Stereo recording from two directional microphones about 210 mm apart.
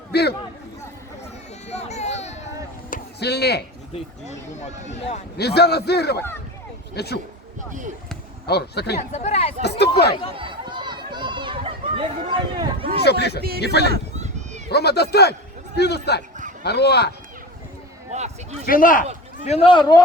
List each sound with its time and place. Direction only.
0.1 s a sound: 50° left (ahead or behind)
1.6 s a sound: 30° left (ahead or behind)
2.9 s a sound: 50° left (ahead or behind)
3.9 s speech: 35° left (ahead or behind)
5.4 s a man's voice: 50° left (ahead or behind)
8.4 s a man's voice: 50° left (ahead or behind)
9.0 s speech: 35° left (ahead or behind)
9.6 s a man's voice: 50° left (ahead or behind)
10.3 s run: 25° right (ahead or behind)
13.1 s a man's voice: 50° left (ahead or behind)
14.2 s a sound: 35° right (ahead or behind)
14.7 s a man's voice: 50° left (ahead or behind)
18.6 s speech: 40° left (ahead or behind)
19.4 s a man's voice: 30° left (ahead or behind)